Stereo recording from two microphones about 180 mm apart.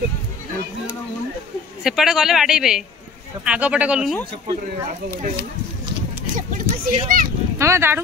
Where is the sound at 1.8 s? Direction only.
Centre (ahead or behind).